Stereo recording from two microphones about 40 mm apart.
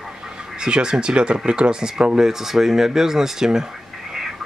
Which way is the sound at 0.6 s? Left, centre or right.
Right.